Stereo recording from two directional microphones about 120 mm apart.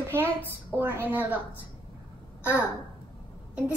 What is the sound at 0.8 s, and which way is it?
Speech, 15° right (ahead or behind).